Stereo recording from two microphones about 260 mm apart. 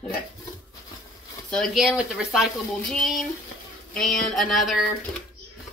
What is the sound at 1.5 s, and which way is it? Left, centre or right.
Speech, centre.